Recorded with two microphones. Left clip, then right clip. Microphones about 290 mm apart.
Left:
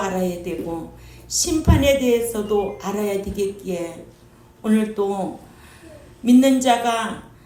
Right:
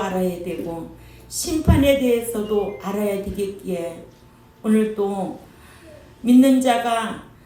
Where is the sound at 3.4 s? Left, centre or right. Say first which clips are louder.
Left 2 dB; left.